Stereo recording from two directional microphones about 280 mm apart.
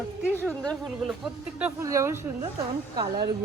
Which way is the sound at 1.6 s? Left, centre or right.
Centre.